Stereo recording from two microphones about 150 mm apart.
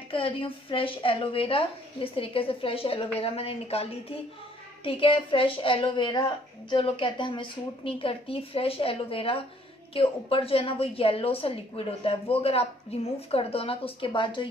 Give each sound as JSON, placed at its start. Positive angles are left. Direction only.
{"t": 0.1, "sound": "a woman's voice", "side_deg": 35}